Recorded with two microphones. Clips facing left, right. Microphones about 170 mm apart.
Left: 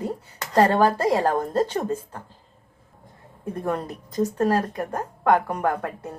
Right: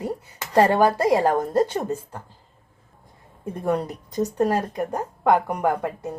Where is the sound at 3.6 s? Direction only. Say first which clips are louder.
Right 4 dB; 15° right (ahead or behind).